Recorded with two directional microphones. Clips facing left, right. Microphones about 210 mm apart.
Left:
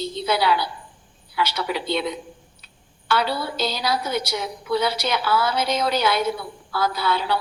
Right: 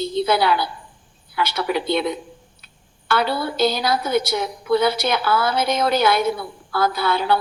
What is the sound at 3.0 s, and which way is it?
A woman's voice, 55° right (ahead or behind).